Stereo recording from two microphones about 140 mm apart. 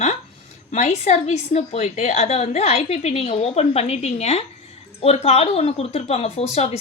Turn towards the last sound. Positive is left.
turn(degrees=45)  # may be behind; listen again after turning